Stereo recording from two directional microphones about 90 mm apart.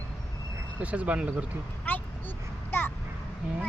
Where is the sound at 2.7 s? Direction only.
25° left (ahead or behind).